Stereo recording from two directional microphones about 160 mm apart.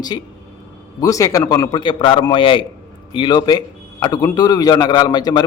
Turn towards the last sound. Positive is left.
turn(degrees=25)  # may be behind; listen again after turning